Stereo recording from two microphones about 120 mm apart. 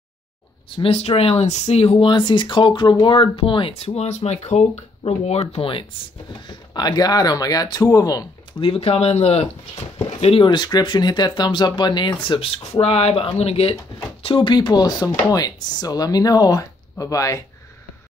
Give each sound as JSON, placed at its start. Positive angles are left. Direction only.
{"t": 0.7, "sound": "speech", "side_deg": 55}
{"t": 2.0, "sound": "speech", "side_deg": 45}
{"t": 6.7, "sound": "speech", "side_deg": 35}
{"t": 8.5, "sound": "speech", "side_deg": 50}
{"t": 10.2, "sound": "speech", "side_deg": 45}
{"t": 14.2, "sound": "speech", "side_deg": 45}